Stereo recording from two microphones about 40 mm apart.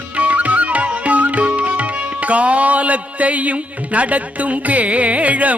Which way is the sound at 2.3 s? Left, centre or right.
Right.